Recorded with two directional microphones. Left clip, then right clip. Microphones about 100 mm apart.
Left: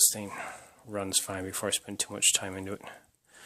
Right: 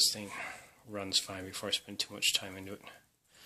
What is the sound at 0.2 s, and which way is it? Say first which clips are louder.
Speech: left 3 dB; 30° left (ahead or behind).